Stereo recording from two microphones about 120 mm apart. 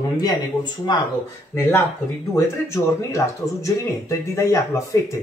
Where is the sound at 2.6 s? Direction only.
25° left (ahead or behind).